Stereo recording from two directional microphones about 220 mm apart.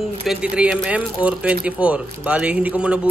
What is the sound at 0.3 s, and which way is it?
A man's voice, 5° right (ahead or behind).